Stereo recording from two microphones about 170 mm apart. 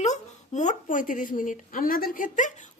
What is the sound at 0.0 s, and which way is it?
Speech, 45° left (ahead or behind).